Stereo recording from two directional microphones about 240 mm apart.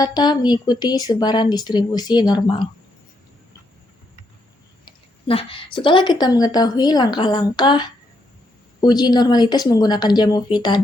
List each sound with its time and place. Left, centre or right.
0.0 s speech: centre
5.2 s speech: left